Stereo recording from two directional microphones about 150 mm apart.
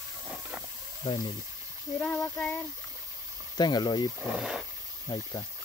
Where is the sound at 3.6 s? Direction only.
30° left (ahead or behind).